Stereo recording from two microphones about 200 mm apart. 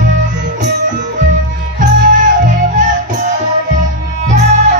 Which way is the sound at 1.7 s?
40° right (ahead or behind).